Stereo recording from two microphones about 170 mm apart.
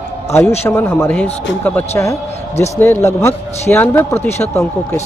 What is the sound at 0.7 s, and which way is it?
Speech, 10° left (ahead or behind).